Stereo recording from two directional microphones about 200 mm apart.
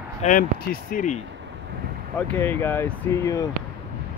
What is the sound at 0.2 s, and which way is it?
Speech, 45° left (ahead or behind).